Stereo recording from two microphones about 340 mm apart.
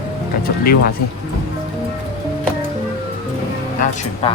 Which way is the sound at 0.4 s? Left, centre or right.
Left.